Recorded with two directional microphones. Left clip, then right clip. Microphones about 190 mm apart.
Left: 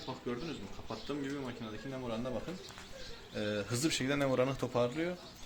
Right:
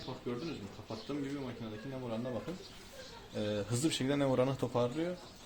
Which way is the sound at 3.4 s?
15° right (ahead or behind).